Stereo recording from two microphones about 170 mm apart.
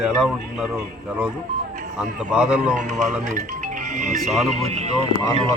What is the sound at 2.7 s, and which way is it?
Speech, 45° right (ahead or behind).